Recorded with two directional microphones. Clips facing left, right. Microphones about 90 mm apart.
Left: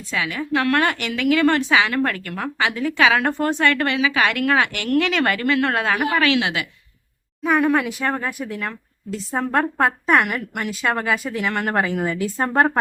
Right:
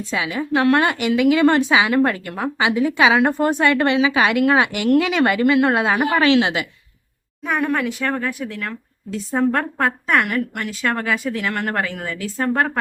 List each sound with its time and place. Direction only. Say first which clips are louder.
0.1 s a woman's voice: right 1 dB; 20° right (ahead or behind)
7.4 s speech: left 3 dB; centre (ahead or behind)
11.7 s speech: left 3 dB; 15° left (ahead or behind)
12.4 s speech: left 1 dB; 25° left (ahead or behind)